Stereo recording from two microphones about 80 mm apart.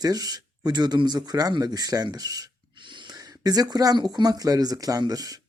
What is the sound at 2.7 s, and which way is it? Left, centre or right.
Gasp, right.